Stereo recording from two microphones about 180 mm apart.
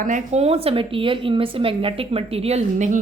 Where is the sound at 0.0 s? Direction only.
40° right (ahead or behind).